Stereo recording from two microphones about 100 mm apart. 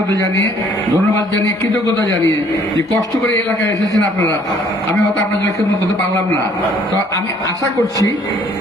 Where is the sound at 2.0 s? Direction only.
35° left (ahead or behind).